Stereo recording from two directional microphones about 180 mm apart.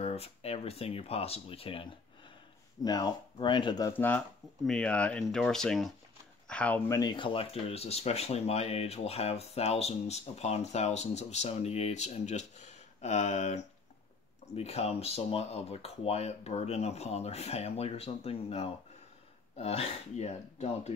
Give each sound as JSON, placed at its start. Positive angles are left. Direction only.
{"t": 0.0, "sound": "speech", "side_deg": 35}
{"t": 3.9, "sound": "speech", "side_deg": 10}
{"t": 7.0, "sound": "speech", "side_deg": 25}